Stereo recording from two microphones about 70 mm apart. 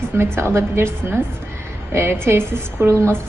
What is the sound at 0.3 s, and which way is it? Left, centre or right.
A woman's voice, right.